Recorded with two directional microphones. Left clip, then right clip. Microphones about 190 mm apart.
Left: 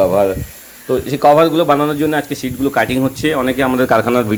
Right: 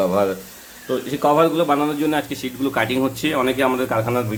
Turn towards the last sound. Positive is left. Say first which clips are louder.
# left 8 dB
turn(degrees=40)  # may be behind; listen again after turning